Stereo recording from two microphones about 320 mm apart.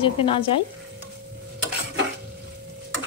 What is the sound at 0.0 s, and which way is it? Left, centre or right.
Speech, centre.